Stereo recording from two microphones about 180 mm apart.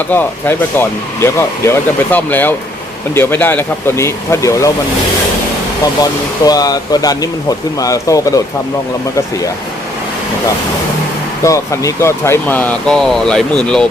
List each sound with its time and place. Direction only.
0.1 s speech: 10° left (ahead or behind)
6.0 s speech: 20° left (ahead or behind)
11.4 s speech: 15° left (ahead or behind)